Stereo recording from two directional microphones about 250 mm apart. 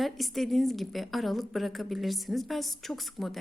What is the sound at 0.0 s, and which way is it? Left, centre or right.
A woman's voice, centre.